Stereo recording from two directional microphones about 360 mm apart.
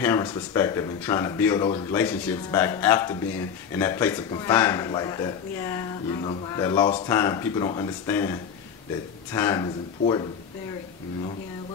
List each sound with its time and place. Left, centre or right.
0.0 s speech: centre